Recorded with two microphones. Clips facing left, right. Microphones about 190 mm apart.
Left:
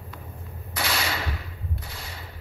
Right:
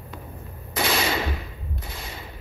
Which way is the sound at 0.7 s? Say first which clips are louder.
Right 5 dB; 20° right (ahead or behind).